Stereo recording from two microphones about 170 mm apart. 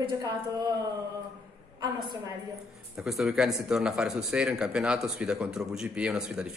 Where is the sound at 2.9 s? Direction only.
5° right (ahead or behind).